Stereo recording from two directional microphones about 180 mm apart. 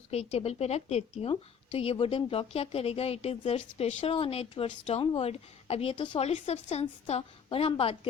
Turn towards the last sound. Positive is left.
turn(degrees=30)  # may be behind; listen again after turning